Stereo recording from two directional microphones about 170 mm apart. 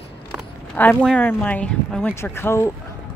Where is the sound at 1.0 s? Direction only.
5° left (ahead or behind).